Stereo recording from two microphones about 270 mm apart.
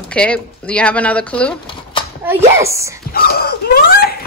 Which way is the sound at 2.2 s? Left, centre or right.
Centre.